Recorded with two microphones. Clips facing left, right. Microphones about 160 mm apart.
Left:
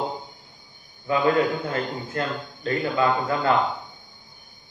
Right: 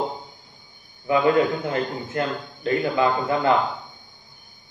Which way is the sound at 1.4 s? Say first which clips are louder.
Right 2 dB; 25° right (ahead or behind).